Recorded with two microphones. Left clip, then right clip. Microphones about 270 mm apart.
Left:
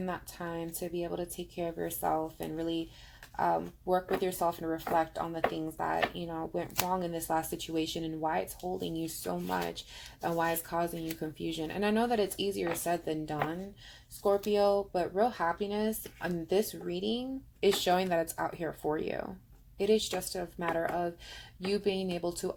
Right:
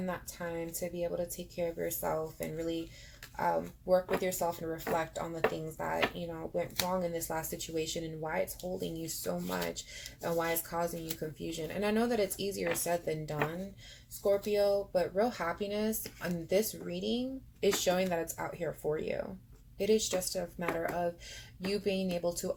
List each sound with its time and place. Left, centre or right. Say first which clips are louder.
0.0 s speech: left 1 dB; left
14.5 s speech: left 1 dB; left